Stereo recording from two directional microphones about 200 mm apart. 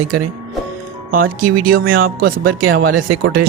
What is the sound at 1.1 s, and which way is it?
Speech, 45° right (ahead or behind).